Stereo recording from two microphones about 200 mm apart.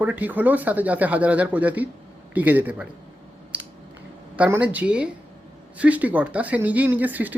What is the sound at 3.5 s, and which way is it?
Scissors, 5° right (ahead or behind).